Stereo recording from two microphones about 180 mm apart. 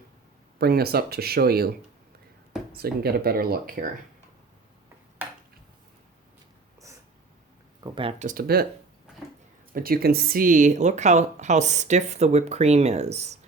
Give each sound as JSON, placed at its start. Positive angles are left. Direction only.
{"t": 0.6, "sound": "speech", "side_deg": -60}
{"t": 2.7, "sound": "speech", "side_deg": -60}
{"t": 7.8, "sound": "speech", "side_deg": -20}
{"t": 8.2, "sound": "speech", "side_deg": -50}
{"t": 9.7, "sound": "speech", "side_deg": -55}